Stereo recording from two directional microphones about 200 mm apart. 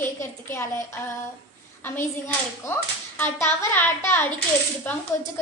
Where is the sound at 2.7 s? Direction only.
10° left (ahead or behind).